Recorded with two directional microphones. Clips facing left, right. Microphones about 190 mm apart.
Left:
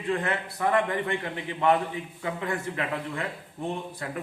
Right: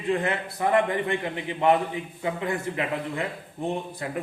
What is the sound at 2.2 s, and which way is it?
A man's voice, 15° right (ahead or behind).